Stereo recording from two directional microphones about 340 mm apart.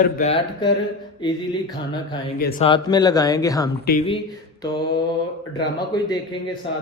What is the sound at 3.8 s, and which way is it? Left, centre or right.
Speech, left.